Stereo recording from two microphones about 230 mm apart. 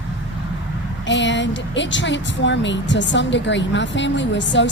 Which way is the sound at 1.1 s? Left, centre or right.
Left.